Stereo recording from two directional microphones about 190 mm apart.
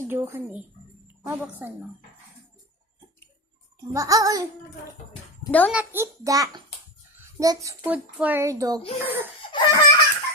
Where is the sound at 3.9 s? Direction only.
15° right (ahead or behind).